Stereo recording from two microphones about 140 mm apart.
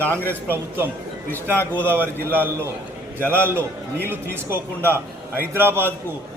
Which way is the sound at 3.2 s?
15° left (ahead or behind).